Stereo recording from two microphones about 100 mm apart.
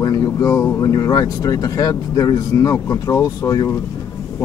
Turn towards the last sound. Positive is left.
turn(degrees=35)  # may be behind; listen again after turning